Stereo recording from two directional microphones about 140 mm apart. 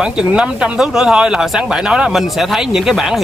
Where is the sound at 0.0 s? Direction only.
5° right (ahead or behind).